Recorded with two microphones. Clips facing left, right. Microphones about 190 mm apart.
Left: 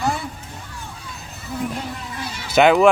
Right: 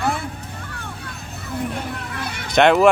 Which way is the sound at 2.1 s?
60° right (ahead or behind).